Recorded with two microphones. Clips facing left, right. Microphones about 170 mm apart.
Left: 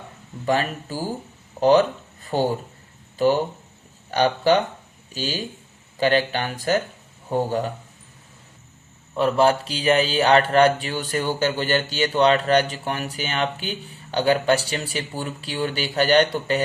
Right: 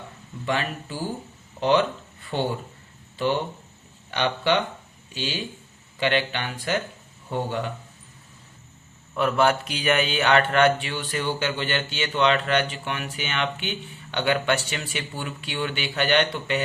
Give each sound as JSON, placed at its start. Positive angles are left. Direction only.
{"t": 0.4, "sound": "speech", "side_deg": 40}
{"t": 9.1, "sound": "speech", "side_deg": 30}